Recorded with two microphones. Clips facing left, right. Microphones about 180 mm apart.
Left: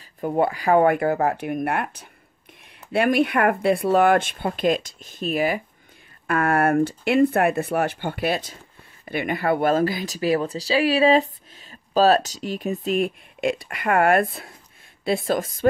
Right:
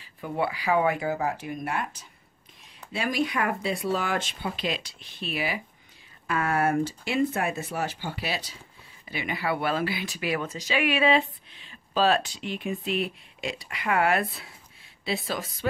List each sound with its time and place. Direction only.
0.2 s a woman's voice: 45° left (ahead or behind)